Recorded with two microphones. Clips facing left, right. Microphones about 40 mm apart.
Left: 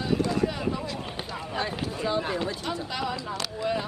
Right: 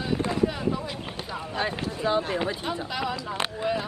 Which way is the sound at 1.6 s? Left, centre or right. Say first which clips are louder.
Right 3 dB; centre.